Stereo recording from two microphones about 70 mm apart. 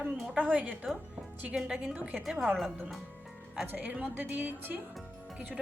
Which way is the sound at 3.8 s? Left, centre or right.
Centre.